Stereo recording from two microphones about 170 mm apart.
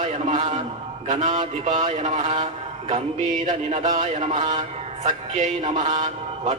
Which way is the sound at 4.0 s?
40° right (ahead or behind).